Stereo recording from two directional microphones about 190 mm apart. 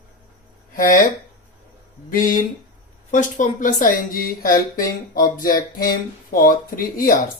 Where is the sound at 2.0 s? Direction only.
45° left (ahead or behind).